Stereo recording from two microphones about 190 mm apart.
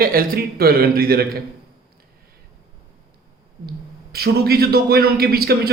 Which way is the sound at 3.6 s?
55° right (ahead or behind).